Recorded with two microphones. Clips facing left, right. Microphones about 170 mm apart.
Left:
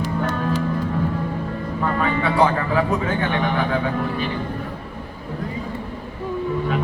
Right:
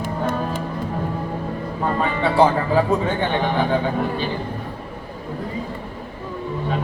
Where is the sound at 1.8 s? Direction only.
30° right (ahead or behind).